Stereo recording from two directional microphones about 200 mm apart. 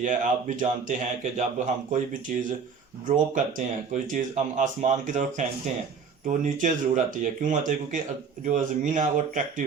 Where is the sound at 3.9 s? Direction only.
40° right (ahead or behind).